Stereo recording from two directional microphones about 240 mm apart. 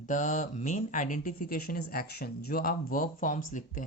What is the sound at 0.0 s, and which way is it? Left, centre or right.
Speech, left.